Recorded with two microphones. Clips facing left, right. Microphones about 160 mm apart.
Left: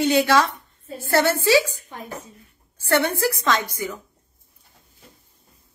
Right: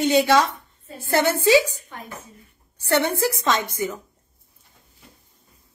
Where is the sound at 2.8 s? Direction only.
20° right (ahead or behind).